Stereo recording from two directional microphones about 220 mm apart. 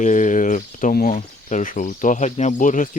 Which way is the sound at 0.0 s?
35° left (ahead or behind).